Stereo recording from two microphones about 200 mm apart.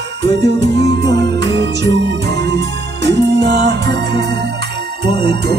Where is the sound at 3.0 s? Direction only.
55° right (ahead or behind).